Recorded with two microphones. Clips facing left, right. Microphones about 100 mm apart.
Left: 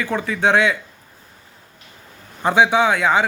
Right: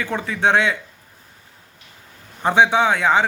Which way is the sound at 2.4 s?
25° right (ahead or behind).